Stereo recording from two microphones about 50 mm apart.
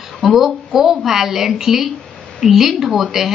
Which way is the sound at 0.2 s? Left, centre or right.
Centre.